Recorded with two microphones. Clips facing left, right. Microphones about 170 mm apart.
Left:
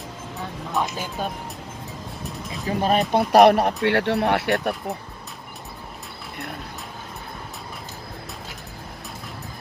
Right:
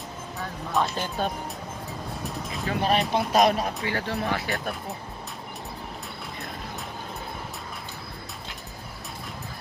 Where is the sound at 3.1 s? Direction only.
60° left (ahead or behind).